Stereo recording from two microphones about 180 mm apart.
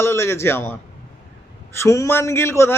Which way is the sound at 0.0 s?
15° left (ahead or behind).